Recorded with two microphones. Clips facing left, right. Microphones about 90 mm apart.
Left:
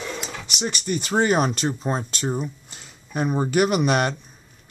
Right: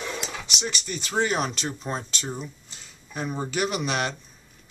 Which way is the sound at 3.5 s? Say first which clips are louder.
Left 7 dB; 50° left (ahead or behind).